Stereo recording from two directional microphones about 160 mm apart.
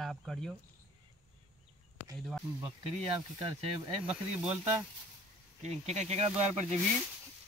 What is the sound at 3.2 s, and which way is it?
Speech, 25° right (ahead or behind).